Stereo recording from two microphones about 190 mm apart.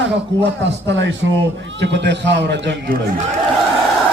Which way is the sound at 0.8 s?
70° right (ahead or behind).